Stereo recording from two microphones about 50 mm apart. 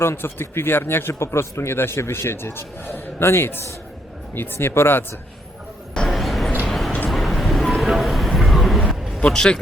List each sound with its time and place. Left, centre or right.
0.0 s speech: left
6.1 s a sound: centre
9.2 s a man's voice: centre